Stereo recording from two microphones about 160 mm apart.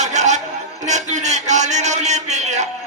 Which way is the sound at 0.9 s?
45° right (ahead or behind).